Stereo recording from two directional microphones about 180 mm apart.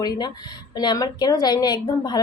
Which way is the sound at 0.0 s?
25° left (ahead or behind).